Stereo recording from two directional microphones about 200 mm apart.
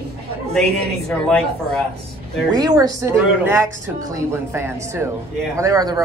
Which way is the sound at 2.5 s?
20° right (ahead or behind).